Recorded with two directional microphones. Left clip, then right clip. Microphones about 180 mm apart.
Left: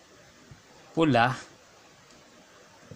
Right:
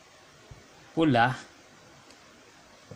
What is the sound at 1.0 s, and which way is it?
Speech, 10° left (ahead or behind).